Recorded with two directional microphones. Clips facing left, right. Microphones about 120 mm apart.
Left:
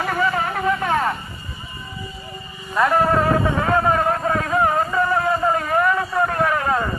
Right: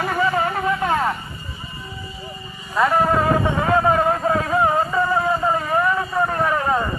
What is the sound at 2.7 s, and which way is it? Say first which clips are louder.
Speech: even; 5° right (ahead or behind).